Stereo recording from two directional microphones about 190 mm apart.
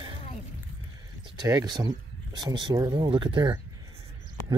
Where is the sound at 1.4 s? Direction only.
20° right (ahead or behind).